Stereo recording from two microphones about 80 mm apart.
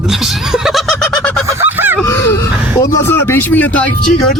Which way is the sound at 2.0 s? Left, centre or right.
Left.